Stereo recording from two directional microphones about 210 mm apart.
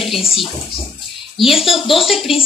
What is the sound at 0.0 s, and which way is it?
Bathtub, centre (ahead or behind).